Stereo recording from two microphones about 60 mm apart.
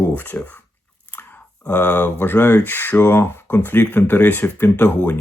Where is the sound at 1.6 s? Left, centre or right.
Left.